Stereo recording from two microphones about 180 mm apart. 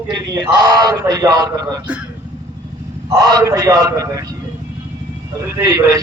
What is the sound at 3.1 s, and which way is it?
A man's voice, 20° right (ahead or behind).